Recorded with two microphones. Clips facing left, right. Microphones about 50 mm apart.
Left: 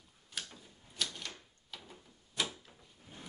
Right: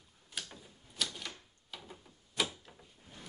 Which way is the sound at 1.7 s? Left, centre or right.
Centre.